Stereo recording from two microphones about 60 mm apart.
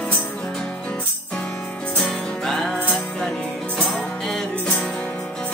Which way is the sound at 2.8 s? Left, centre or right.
Left.